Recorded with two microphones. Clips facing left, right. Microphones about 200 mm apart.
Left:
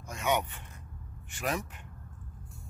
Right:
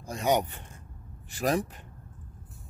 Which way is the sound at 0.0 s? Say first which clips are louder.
Right 4 dB; 35° right (ahead or behind).